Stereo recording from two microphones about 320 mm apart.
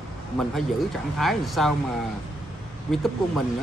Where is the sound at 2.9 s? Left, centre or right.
Centre.